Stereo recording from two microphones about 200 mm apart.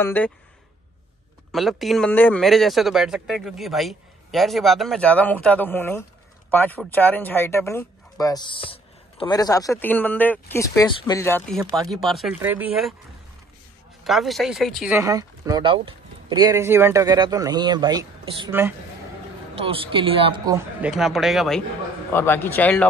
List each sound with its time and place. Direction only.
0.0 s speech: 10° left (ahead or behind)
1.5 s speech: centre (ahead or behind)
14.0 s speech: centre (ahead or behind)
15.0 s speech: 15° right (ahead or behind)
18.5 s speech: 10° right (ahead or behind)
19.5 s speech: 25° right (ahead or behind)
20.8 s speech: centre (ahead or behind)
22.1 s speech: 10° left (ahead or behind)